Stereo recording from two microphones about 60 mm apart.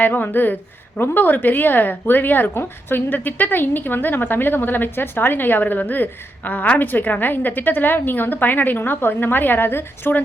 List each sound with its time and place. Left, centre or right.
0.0 s a woman's voice: left